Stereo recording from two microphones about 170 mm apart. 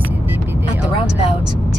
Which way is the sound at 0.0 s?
10° right (ahead or behind).